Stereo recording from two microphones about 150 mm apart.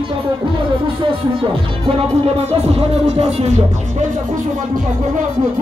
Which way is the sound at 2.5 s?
45° right (ahead or behind).